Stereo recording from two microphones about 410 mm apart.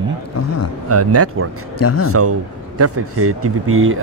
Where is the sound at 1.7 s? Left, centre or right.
Left.